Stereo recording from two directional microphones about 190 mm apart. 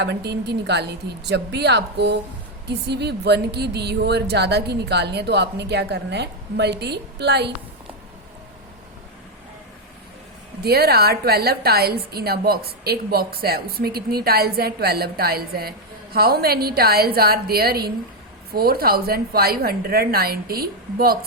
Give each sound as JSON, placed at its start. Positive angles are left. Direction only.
{"t": 0.0, "sound": "a woman's voice", "side_deg": -60}
{"t": 10.6, "sound": "a woman's voice", "side_deg": -55}